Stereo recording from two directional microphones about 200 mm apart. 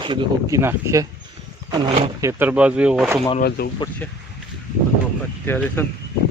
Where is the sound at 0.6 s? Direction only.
15° right (ahead or behind).